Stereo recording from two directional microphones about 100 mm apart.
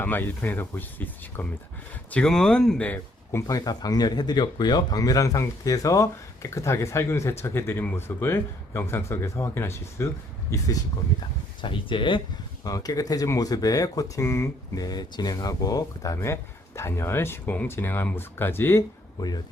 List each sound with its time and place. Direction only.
0.0 s speech: 20° left (ahead or behind)
3.4 s speech: 40° left (ahead or behind)
11.6 s speech: 55° left (ahead or behind)
12.6 s speech: 40° left (ahead or behind)
14.8 s speech: 40° left (ahead or behind)
16.1 s speech: 25° left (ahead or behind)